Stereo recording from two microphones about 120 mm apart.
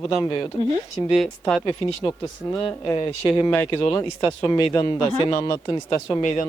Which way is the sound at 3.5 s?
15° left (ahead or behind).